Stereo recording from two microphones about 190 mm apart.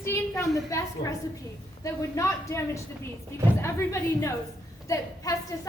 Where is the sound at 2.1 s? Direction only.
15° left (ahead or behind).